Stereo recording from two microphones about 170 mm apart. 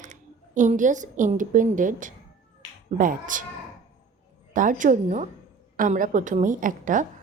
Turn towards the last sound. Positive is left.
turn(degrees=-50)  # may be behind; listen again after turning